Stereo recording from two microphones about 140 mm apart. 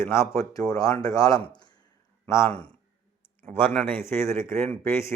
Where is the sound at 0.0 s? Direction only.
20° left (ahead or behind).